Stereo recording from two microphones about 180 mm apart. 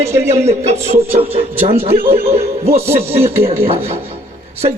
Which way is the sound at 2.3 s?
35° right (ahead or behind).